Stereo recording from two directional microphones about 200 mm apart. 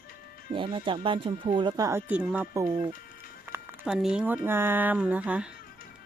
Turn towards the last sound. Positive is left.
turn(degrees=-5)  # may be behind; listen again after turning